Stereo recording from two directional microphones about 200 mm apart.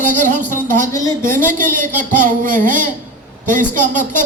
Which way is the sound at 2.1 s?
40° right (ahead or behind).